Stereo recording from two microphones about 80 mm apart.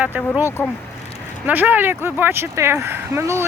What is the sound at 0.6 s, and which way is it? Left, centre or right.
Speech, left.